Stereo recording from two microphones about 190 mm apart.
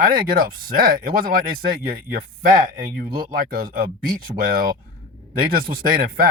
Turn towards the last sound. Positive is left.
turn(degrees=-50)  # may be behind; listen again after turning